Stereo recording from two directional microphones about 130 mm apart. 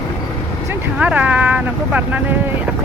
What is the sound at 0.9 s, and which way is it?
Speech, 10° right (ahead or behind).